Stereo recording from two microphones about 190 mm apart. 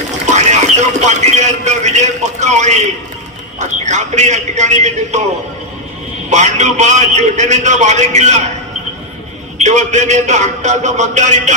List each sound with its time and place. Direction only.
0.3 s a man's voice: 40° right (ahead or behind)
6.3 s a man's voice: 40° right (ahead or behind)
9.6 s a man's voice: 40° right (ahead or behind)